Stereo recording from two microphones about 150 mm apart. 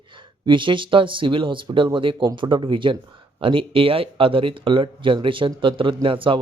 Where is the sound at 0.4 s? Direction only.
35° right (ahead or behind).